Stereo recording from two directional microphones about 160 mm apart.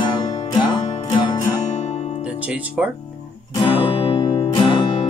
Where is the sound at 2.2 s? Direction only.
10° right (ahead or behind).